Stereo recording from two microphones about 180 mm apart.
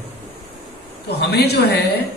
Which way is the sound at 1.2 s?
65° left (ahead or behind).